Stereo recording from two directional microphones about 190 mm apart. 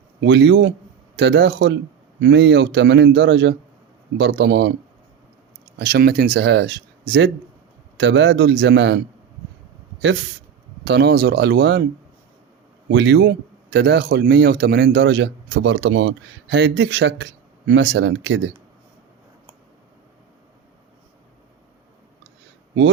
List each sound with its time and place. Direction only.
0.2 s a man's voice: 70° right (ahead or behind)
5.8 s speech: 55° right (ahead or behind)
7.9 s a man's voice: 70° right (ahead or behind)
10.8 s speech: 60° right (ahead or behind)
12.9 s speech: 60° right (ahead or behind)